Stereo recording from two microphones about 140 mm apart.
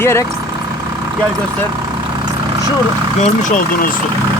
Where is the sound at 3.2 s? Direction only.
70° left (ahead or behind).